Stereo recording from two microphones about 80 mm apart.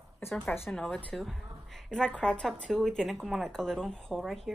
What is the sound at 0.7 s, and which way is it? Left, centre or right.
A woman's voice, centre.